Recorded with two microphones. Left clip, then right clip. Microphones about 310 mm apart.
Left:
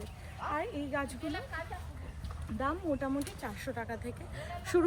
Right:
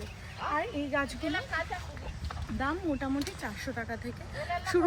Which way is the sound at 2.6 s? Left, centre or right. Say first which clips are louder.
Right 1 dB; centre.